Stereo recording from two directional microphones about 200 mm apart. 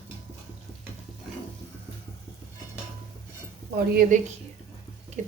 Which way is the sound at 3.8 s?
45° right (ahead or behind).